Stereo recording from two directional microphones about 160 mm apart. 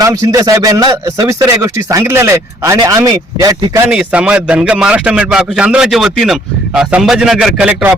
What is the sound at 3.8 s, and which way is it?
A man's voice, 5° right (ahead or behind).